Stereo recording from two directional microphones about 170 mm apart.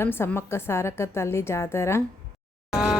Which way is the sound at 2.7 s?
5° right (ahead or behind).